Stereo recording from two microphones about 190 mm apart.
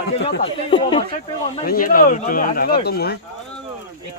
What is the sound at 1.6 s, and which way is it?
Speech, 50° left (ahead or behind).